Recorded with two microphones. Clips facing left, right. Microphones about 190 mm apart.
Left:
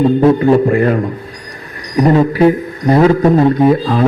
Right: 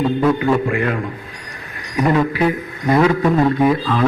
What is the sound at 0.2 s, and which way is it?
Speech, 35° left (ahead or behind).